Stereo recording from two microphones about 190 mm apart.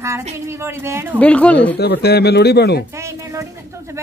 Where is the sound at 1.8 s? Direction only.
60° left (ahead or behind).